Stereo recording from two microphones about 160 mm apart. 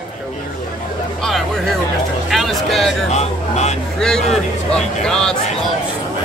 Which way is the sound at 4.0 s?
5° left (ahead or behind).